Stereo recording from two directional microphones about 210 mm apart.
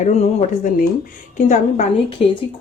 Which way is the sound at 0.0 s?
30° left (ahead or behind).